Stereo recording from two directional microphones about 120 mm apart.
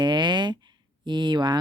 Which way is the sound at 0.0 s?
40° right (ahead or behind).